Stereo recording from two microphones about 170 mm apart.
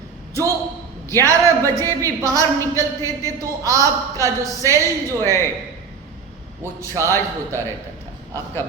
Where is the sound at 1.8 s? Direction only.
20° right (ahead or behind).